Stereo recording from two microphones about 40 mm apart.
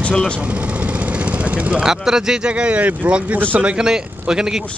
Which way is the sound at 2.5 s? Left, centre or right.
Right.